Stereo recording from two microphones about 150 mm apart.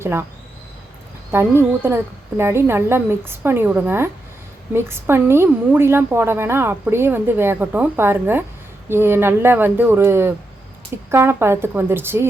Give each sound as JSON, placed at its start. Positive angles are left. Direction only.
{"t": 0.0, "sound": "a woman's voice", "side_deg": -15}
{"t": 1.3, "sound": "a woman's voice", "side_deg": -15}